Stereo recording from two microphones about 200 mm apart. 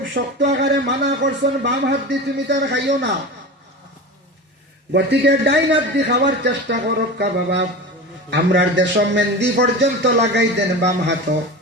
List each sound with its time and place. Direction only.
0.0 s a man's voice: 65° right (ahead or behind)
4.9 s a man's voice: 60° right (ahead or behind)